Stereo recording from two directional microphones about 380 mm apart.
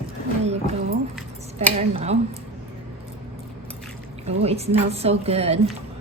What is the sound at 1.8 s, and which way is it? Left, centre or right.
Speech, centre.